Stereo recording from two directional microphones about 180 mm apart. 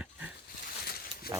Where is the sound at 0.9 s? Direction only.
55° left (ahead or behind).